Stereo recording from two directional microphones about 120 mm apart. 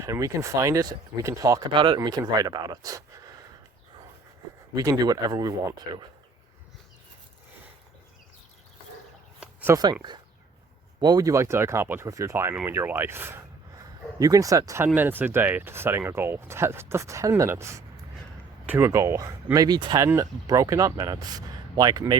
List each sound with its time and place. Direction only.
0.0 s speech: 25° right (ahead or behind)
1.7 s speech: 45° right (ahead or behind)
2.0 s speech: 35° right (ahead or behind)
4.7 s speech: 30° right (ahead or behind)
9.4 s a sound: 10° right (ahead or behind)
9.7 s speech: 35° right (ahead or behind); by 13.8 s 20° right (ahead or behind)
14.2 s speech: 30° right (ahead or behind)
14.9 s speech: 15° right (ahead or behind); by 22.2 s 35° right (ahead or behind)